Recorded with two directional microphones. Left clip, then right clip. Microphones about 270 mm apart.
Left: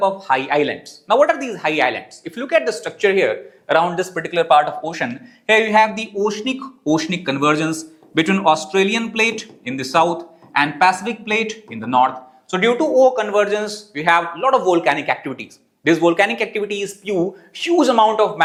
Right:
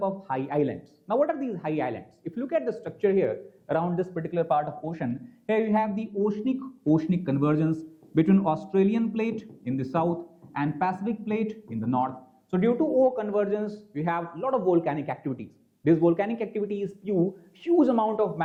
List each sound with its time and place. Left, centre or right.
0.0 s a man's voice: centre
12.9 s speech: left
13.1 s speech: centre